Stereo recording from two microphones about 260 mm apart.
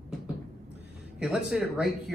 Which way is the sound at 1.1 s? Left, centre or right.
Centre.